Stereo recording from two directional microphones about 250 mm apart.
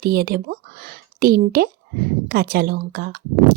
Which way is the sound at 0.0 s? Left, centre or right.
Right.